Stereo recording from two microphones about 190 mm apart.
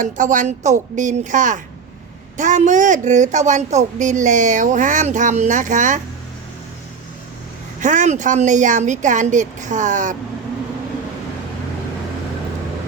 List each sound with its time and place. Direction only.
0.0 s speech: 40° right (ahead or behind)
7.8 s speech: 40° right (ahead or behind)